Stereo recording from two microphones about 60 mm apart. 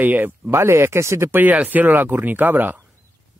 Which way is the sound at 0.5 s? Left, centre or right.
Right.